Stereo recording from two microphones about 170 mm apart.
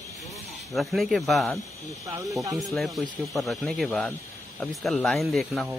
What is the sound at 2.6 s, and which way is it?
Speech, centre (ahead or behind).